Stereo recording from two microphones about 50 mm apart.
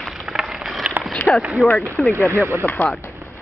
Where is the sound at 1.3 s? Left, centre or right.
Centre.